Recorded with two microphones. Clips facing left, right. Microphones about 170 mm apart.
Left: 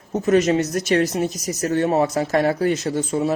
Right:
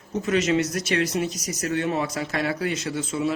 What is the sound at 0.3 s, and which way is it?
Speech, 35° left (ahead or behind).